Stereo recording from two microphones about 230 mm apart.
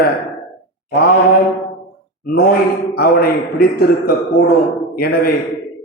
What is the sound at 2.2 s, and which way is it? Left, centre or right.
A man's voice, left.